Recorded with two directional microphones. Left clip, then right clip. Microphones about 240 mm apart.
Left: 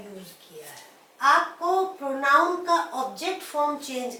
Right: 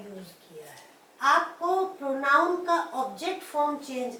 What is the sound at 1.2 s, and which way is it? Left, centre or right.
Speech, centre.